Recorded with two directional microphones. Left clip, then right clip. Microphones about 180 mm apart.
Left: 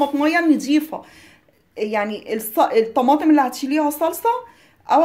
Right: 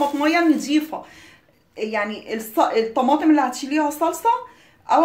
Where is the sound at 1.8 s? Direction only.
50° left (ahead or behind).